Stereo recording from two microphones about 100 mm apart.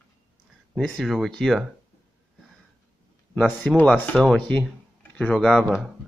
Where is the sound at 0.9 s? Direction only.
Centre (ahead or behind).